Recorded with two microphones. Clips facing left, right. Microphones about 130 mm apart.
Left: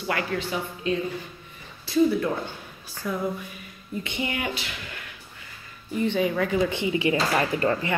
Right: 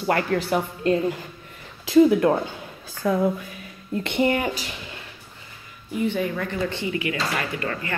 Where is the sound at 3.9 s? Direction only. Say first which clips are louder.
Right 6 dB; 70° right (ahead or behind).